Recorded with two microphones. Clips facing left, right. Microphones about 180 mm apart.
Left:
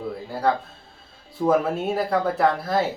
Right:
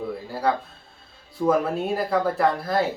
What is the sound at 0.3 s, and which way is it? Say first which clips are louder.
Speech: left 2 dB; centre (ahead or behind).